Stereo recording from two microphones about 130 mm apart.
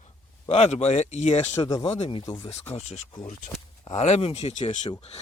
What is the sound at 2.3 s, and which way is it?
Speech, 45° left (ahead or behind).